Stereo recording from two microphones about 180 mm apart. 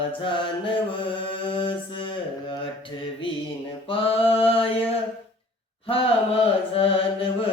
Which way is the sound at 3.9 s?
30° left (ahead or behind).